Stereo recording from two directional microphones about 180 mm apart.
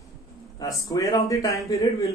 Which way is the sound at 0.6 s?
20° left (ahead or behind).